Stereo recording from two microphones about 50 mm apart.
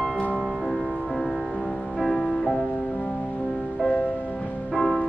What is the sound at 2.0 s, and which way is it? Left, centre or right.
Music, centre.